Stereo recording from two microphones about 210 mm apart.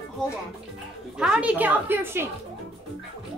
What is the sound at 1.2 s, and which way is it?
Speech, 5° right (ahead or behind).